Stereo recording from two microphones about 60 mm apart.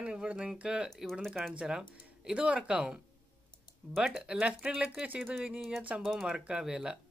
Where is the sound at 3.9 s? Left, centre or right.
Centre.